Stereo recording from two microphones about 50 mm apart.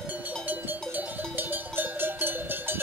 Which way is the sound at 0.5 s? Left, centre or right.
Right.